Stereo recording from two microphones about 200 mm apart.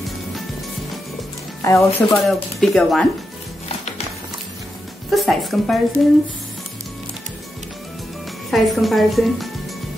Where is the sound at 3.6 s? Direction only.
30° left (ahead or behind).